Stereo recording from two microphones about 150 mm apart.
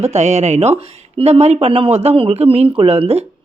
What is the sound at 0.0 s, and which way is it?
Speech, 50° right (ahead or behind).